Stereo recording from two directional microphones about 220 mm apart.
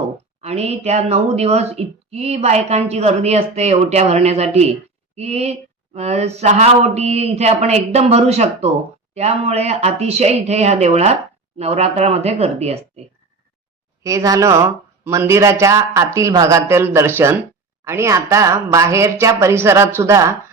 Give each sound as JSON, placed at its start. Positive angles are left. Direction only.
{"t": 0.4, "sound": "speech", "side_deg": -30}
{"t": 14.0, "sound": "a woman's voice", "side_deg": -15}